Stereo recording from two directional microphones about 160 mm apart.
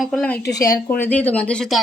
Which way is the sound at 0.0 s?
5° left (ahead or behind).